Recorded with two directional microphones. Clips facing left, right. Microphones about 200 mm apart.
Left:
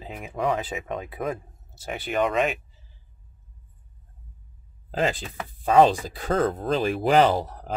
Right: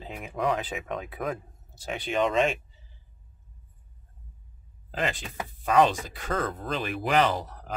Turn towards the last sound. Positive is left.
turn(degrees=30)  # may be behind; listen again after turning